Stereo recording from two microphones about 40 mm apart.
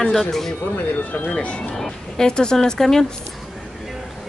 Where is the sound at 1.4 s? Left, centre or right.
Left.